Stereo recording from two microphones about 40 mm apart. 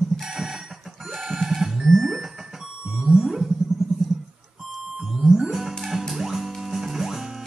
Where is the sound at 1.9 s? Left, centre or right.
Centre.